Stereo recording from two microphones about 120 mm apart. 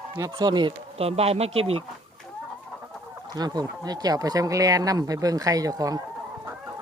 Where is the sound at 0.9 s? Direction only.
60° right (ahead or behind).